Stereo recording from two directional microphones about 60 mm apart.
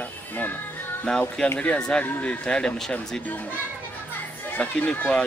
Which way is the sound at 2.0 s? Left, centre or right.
Left.